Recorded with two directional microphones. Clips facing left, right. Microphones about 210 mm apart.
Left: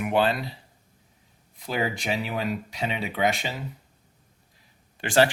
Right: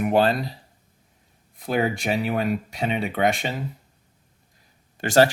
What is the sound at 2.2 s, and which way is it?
Speech, 55° right (ahead or behind).